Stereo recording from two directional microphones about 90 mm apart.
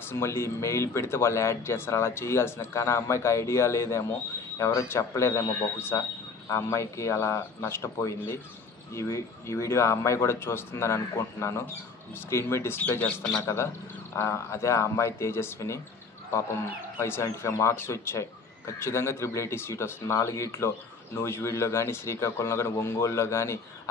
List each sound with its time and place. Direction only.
0.0 s speech: 25° left (ahead or behind)
13.0 s speech: 5° left (ahead or behind)
13.4 s speech: 30° left (ahead or behind)
17.0 s speech: 30° left (ahead or behind)